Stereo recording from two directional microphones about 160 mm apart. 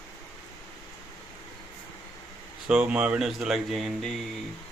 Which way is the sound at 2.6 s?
5° right (ahead or behind).